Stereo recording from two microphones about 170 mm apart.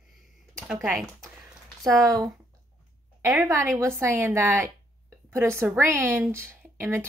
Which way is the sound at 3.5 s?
15° right (ahead or behind).